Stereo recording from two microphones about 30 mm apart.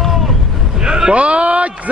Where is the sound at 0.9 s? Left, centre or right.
Right.